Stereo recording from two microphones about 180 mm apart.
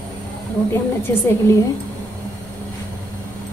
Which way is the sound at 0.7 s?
15° left (ahead or behind).